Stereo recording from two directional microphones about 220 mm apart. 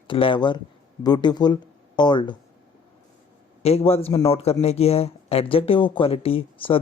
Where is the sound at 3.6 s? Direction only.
30° left (ahead or behind).